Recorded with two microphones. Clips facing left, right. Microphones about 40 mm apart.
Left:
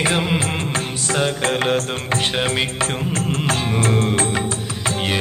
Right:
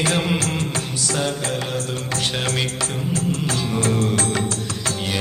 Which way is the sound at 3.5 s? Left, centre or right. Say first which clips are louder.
Left 4 dB; left.